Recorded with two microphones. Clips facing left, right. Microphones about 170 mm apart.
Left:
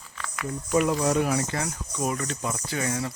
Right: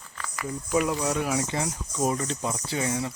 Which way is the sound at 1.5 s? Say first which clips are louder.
Right 1 dB; 20° right (ahead or behind).